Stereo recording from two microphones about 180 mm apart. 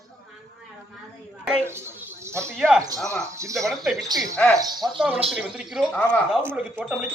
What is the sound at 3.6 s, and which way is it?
Speech, centre (ahead or behind).